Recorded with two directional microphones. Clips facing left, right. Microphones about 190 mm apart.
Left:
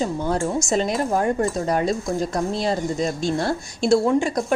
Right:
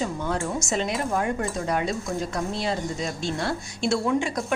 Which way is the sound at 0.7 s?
35° left (ahead or behind).